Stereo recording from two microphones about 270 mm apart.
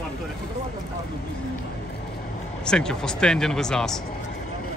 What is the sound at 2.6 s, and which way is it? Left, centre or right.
Speech, centre.